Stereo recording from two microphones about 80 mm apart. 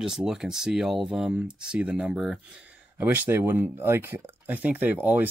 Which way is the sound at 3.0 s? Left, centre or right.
Right.